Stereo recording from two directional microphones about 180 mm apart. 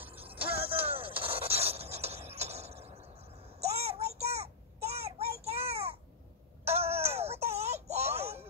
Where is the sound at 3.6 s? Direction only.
35° right (ahead or behind).